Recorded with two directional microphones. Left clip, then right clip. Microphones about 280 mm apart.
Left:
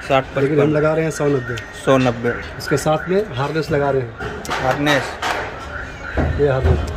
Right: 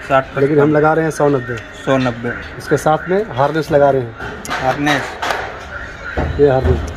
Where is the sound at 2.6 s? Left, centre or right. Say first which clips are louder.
Right 4 dB; centre.